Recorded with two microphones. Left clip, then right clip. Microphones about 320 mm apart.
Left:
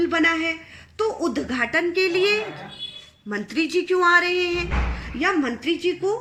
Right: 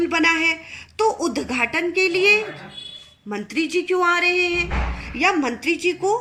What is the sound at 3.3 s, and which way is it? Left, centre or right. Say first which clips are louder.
Speech: even; centre.